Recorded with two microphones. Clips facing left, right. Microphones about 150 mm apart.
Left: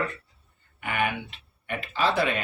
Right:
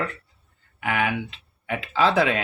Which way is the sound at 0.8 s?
90° right.